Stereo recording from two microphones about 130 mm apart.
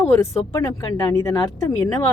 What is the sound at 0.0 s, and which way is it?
Speech, 25° left (ahead or behind).